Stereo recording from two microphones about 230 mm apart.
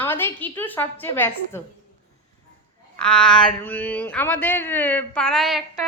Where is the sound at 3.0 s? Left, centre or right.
Centre.